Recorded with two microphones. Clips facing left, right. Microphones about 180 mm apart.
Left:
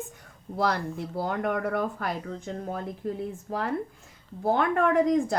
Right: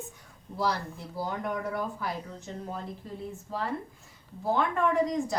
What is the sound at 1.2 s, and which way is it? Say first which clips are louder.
Speech: left 4 dB; 65° left (ahead or behind).